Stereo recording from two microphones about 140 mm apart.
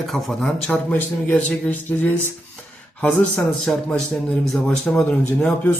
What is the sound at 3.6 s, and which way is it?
A man's voice, 5° left (ahead or behind).